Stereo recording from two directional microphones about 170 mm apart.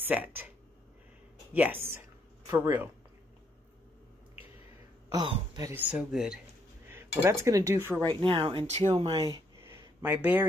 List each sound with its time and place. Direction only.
0.0 s a sound: 10° right (ahead or behind)
1.5 s speech: 10° right (ahead or behind)
5.1 s speech: 25° right (ahead or behind)
5.8 s speech: 5° right (ahead or behind)
8.1 s speech: 30° right (ahead or behind)
8.9 s speech: 25° right (ahead or behind)